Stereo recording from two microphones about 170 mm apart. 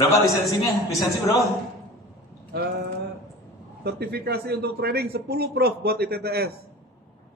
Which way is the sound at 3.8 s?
70° right (ahead or behind).